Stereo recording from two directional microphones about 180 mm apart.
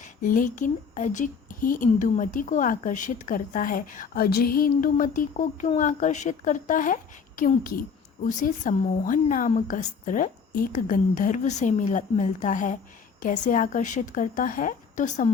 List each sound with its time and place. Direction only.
0.0 s speech: 50° left (ahead or behind)